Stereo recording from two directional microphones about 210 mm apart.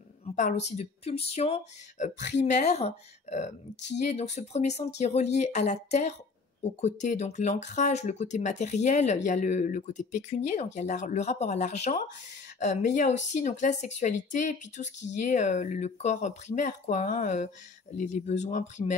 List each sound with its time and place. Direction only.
0.2 s speech: 35° left (ahead or behind)